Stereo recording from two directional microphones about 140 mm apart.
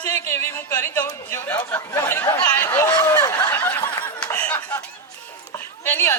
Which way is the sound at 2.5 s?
15° left (ahead or behind).